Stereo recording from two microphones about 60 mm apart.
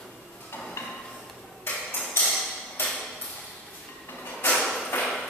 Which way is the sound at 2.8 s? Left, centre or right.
Left.